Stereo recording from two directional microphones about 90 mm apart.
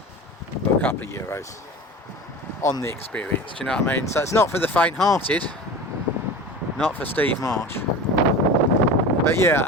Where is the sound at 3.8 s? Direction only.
25° left (ahead or behind).